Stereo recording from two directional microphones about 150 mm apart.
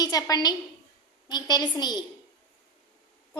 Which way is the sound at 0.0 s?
25° left (ahead or behind).